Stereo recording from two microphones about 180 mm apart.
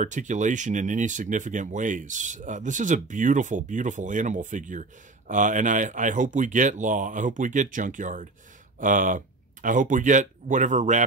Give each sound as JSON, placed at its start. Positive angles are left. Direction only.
{"t": 0.0, "sound": "speech", "side_deg": -45}